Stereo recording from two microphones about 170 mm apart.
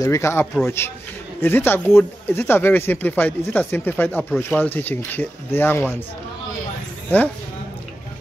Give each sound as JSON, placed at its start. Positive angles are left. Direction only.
{"t": 0.0, "sound": "speech", "side_deg": 15}
{"t": 7.1, "sound": "speech", "side_deg": 10}